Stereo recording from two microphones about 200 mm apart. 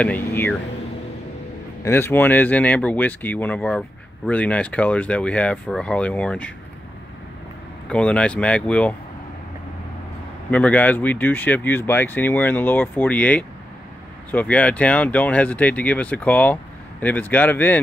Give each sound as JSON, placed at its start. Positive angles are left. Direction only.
{"t": 0.0, "sound": "speech", "side_deg": 10}
{"t": 1.9, "sound": "speech", "side_deg": 10}
{"t": 7.9, "sound": "speech", "side_deg": 5}
{"t": 10.5, "sound": "speech", "side_deg": 5}